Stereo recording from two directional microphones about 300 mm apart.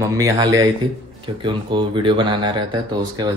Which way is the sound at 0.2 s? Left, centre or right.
Centre.